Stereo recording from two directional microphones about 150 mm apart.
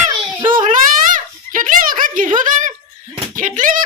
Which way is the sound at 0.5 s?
60° right (ahead or behind).